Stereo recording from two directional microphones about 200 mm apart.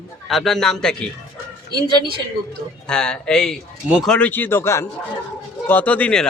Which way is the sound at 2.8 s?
5° left (ahead or behind).